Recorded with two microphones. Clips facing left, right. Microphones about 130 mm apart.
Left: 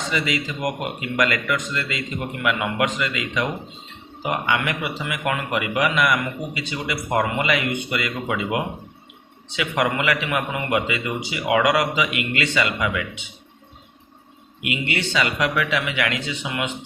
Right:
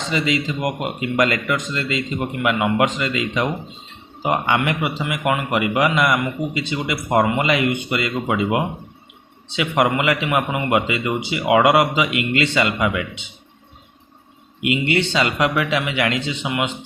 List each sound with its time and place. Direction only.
0.1 s a man's voice: 25° right (ahead or behind)
14.6 s a man's voice: 25° right (ahead or behind)